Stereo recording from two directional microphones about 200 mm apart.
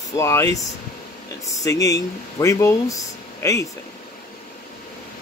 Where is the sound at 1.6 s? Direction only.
15° left (ahead or behind).